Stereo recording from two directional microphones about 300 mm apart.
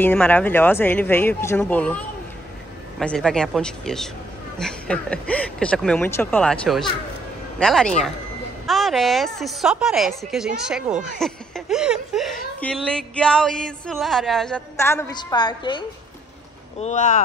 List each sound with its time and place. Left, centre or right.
0.0 s a woman's voice: centre
16.8 s speech: left